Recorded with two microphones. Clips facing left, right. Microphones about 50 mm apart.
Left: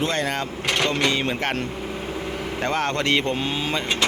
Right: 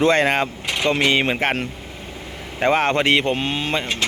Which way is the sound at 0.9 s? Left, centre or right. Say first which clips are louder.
Right 7 dB; right.